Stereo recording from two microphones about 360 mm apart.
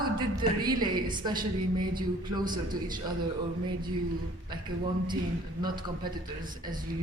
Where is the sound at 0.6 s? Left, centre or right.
Centre.